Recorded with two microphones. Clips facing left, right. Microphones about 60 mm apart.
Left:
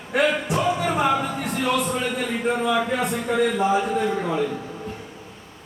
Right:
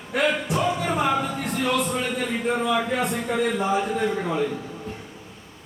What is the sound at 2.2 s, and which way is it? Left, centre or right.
Speech, centre.